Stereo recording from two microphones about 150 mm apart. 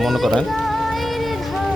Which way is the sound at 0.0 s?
Centre (ahead or behind).